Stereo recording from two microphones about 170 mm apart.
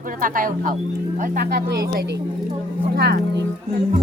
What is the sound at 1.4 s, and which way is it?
Speech, 75° right (ahead or behind).